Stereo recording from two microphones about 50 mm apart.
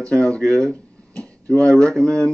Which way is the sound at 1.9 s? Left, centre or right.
Centre.